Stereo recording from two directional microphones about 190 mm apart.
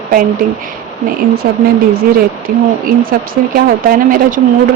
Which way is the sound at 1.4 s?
55° right (ahead or behind).